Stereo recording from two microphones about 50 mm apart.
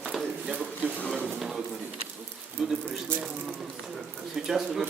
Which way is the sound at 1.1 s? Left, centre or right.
Centre.